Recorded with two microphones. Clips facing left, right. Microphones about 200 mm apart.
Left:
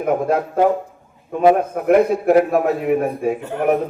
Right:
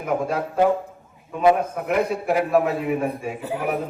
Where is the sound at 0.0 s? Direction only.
55° left (ahead or behind).